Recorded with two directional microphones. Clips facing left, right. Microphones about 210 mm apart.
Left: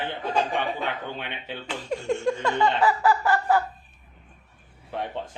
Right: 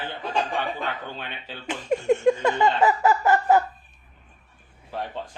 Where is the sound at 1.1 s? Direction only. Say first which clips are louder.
Left 2 dB; 20° left (ahead or behind).